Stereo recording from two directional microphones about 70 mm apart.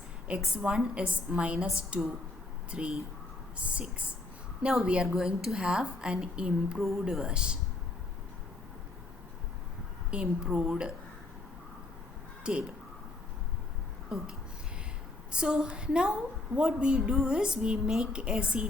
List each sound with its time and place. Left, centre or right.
0.3 s a woman's voice: centre
4.7 s a woman's voice: centre
10.1 s a woman's voice: centre
12.4 s speech: centre
15.3 s a woman's voice: centre